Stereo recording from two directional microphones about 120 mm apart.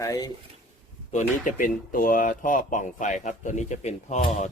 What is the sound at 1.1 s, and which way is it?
Speech, 90° left.